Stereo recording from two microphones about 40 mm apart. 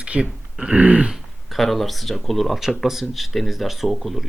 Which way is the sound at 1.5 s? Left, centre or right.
Centre.